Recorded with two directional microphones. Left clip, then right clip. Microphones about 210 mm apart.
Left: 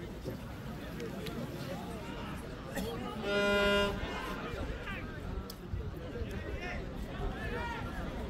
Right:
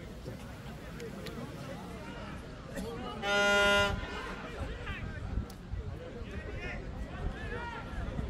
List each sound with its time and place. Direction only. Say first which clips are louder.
3.3 s music: right 3 dB; 20° right (ahead or behind)